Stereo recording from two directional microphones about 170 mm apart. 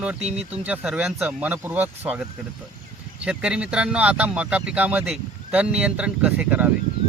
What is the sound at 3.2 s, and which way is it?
Speech, 5° right (ahead or behind).